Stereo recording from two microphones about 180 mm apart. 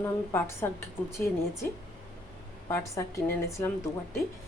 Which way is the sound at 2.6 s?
15° left (ahead or behind).